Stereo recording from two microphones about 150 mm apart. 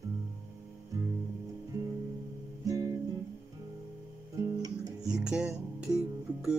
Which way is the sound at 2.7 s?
20° right (ahead or behind).